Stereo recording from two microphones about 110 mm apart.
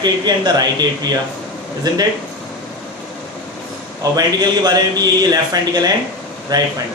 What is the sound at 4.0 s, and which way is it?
A man's voice, 35° right (ahead or behind).